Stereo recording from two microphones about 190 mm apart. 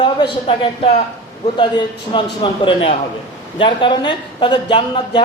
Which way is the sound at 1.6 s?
25° left (ahead or behind).